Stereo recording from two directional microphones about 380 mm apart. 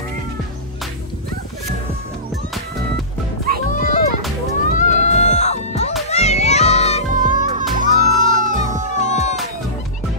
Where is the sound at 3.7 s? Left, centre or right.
Centre.